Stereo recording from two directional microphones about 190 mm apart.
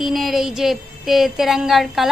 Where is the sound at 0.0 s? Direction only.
Centre (ahead or behind).